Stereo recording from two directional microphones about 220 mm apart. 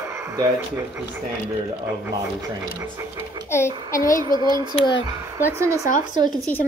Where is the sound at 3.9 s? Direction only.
35° left (ahead or behind).